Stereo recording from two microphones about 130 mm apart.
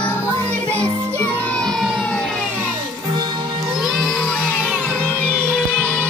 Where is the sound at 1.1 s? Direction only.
15° left (ahead or behind).